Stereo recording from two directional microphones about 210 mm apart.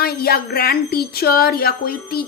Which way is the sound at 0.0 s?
45° left (ahead or behind).